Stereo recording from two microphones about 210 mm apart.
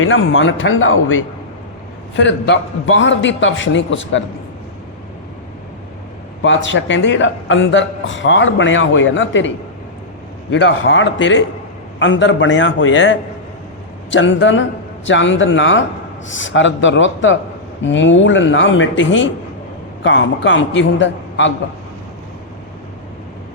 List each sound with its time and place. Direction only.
0.0 s a man's voice: 65° left (ahead or behind)
6.4 s a man's voice: 60° left (ahead or behind)
10.5 s a man's voice: 65° left (ahead or behind)